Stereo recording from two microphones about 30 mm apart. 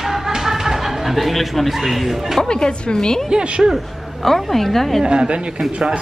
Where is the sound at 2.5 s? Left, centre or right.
Left.